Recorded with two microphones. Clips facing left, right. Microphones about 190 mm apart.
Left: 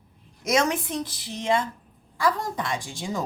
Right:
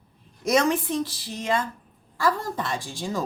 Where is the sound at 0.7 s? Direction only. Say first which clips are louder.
Right 3 dB; 15° left (ahead or behind).